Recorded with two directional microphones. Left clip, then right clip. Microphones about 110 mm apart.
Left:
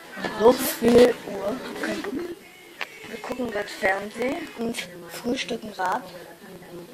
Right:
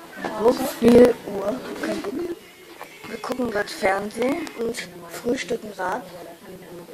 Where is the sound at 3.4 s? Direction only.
45° right (ahead or behind).